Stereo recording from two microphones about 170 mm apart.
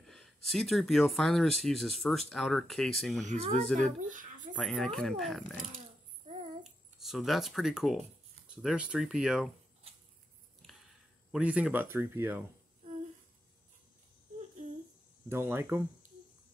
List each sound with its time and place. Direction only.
0.0 s speech: centre (ahead or behind)
4.0 s a sound: 50° right (ahead or behind)
4.6 s speech: 5° left (ahead or behind)
6.2 s babbling: 40° right (ahead or behind)
6.6 s speech: centre (ahead or behind)
11.3 s speech: 5° right (ahead or behind)
15.2 s speech: 15° right (ahead or behind)